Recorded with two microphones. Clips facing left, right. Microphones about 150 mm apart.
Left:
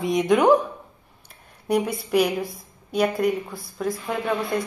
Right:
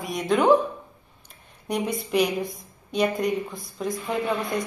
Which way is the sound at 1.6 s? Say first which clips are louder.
Left 4 dB; 10° left (ahead or behind).